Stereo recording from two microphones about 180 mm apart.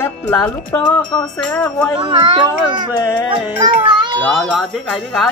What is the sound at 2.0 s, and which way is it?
Speech, 25° right (ahead or behind).